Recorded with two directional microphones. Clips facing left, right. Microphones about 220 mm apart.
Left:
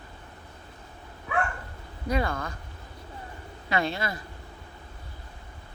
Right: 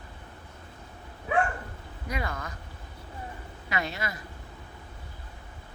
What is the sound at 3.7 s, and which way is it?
Speech, 30° left (ahead or behind).